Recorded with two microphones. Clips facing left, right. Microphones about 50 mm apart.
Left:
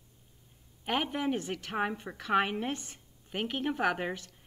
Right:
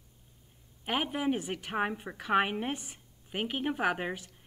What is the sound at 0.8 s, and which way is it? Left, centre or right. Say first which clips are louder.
A woman's voice: even; centre.